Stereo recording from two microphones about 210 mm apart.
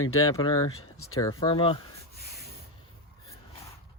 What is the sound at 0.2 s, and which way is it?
Speech, 15° left (ahead or behind).